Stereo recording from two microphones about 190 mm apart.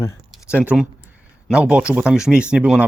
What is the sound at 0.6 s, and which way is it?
Speech, 5° right (ahead or behind).